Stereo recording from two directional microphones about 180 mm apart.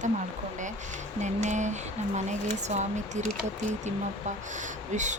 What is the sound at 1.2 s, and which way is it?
Speech, 40° right (ahead or behind).